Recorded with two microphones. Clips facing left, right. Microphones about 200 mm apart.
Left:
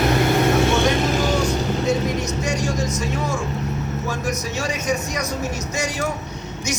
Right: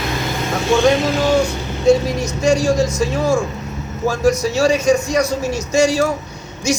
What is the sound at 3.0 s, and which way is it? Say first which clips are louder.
Speech: right 7 dB; 75° right (ahead or behind).